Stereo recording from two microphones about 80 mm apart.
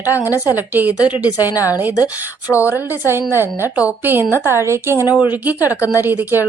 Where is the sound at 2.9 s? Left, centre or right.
Right.